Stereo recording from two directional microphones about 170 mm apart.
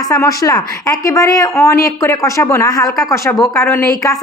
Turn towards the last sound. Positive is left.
turn(degrees=15)  # may be behind; listen again after turning